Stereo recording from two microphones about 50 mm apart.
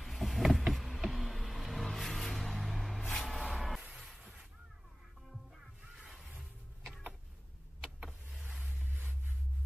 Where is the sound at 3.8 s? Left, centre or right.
Centre.